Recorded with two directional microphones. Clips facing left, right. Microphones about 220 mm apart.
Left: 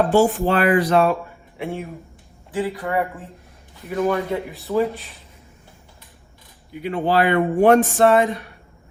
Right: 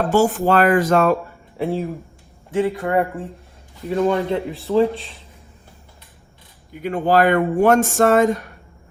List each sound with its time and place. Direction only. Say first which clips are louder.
0.1 s speech: even; 45° right (ahead or behind)
1.5 s speech: right 6 dB; 35° right (ahead or behind)
6.8 s speech: right 3 dB; 45° right (ahead or behind)